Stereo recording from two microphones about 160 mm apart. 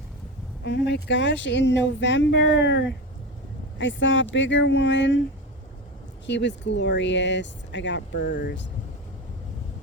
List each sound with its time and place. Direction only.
0.6 s speech: 90° left
4.3 s speech: 90° left
6.2 s speech: 90° left